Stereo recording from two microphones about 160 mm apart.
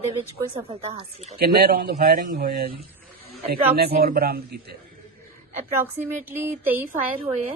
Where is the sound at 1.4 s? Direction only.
75° right (ahead or behind).